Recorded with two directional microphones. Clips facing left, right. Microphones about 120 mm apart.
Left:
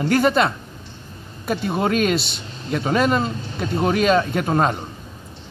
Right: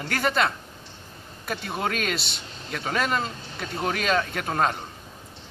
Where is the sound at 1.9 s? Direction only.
15° left (ahead or behind).